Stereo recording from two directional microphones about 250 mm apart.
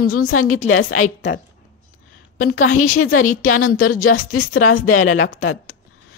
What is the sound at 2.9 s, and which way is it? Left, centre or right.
Speech, left.